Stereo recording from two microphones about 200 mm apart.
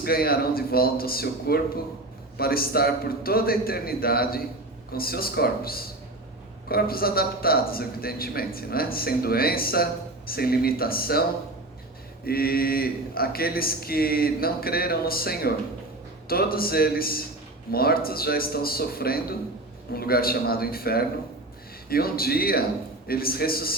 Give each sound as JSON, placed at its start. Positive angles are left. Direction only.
{"t": 0.0, "sound": "speech", "side_deg": 50}
{"t": 12.2, "sound": "speech", "side_deg": 50}